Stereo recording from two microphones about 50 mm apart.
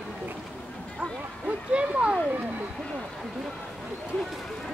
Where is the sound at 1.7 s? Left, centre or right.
Right.